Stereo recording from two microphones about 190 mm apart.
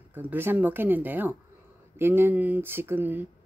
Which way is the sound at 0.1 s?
10° right (ahead or behind).